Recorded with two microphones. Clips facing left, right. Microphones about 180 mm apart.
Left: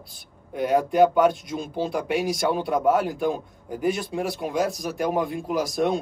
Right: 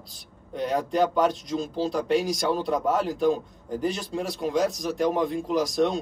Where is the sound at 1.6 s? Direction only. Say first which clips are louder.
Right 1 dB; 55° left (ahead or behind).